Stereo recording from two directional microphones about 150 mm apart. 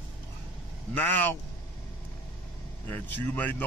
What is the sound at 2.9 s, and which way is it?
Speech, 10° left (ahead or behind).